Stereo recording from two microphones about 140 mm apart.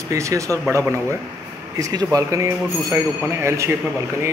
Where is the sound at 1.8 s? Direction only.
25° right (ahead or behind).